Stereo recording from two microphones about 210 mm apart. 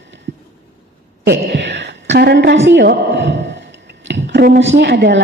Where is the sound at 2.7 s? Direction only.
55° right (ahead or behind).